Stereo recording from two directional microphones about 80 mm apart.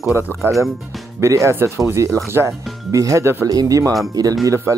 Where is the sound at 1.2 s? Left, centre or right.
Right.